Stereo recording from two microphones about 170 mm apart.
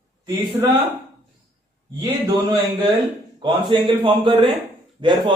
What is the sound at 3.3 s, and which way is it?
A man's voice, 25° right (ahead or behind).